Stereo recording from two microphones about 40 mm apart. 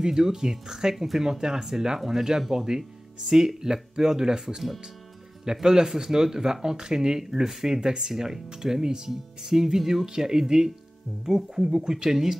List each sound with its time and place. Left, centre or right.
0.0 s speech: centre